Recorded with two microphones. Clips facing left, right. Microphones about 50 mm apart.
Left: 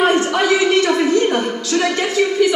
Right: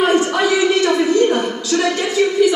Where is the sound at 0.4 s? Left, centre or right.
Left.